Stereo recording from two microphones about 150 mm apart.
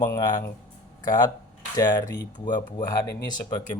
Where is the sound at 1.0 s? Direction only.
25° left (ahead or behind).